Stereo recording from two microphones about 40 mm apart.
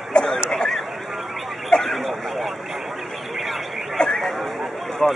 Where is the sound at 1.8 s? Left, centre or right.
Centre.